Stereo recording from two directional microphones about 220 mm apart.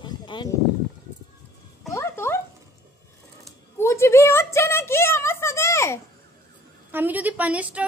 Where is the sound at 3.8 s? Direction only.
10° left (ahead or behind).